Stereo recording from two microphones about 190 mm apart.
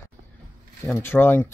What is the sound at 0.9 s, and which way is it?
Speech, 10° left (ahead or behind).